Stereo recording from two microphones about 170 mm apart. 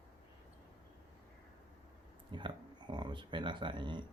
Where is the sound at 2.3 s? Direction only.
25° right (ahead or behind).